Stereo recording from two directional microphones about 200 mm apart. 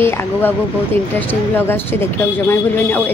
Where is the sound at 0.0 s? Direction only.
10° left (ahead or behind).